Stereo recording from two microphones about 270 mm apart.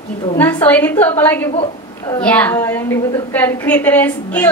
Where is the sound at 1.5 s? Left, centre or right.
Centre.